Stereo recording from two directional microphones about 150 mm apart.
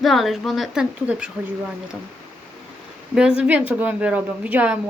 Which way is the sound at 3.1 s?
5° right (ahead or behind).